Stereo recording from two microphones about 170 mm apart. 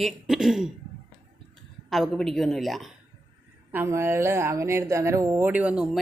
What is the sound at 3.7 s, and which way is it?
Speech, 15° right (ahead or behind).